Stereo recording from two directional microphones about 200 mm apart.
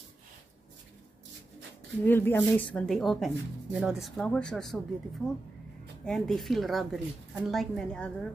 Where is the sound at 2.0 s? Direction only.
10° left (ahead or behind).